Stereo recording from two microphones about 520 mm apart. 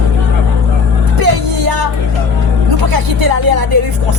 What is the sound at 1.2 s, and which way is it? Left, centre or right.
Music, right.